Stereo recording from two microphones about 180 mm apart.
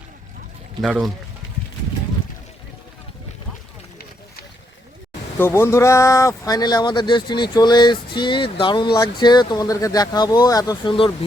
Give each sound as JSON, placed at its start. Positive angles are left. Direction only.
{"t": 0.8, "sound": "speech", "side_deg": 0}
{"t": 5.4, "sound": "speech", "side_deg": 15}